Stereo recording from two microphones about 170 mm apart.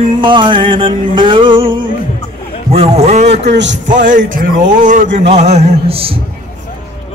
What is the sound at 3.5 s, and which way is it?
Speech, 90° right.